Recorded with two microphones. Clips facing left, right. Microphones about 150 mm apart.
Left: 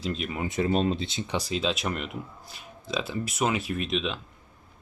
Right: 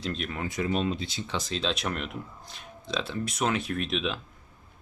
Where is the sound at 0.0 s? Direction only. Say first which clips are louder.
Left 2 dB; 5° left (ahead or behind).